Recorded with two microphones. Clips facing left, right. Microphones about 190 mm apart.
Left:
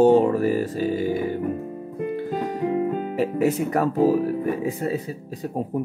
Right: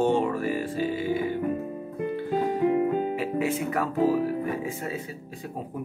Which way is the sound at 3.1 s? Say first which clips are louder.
Left 5 dB; 40° left (ahead or behind).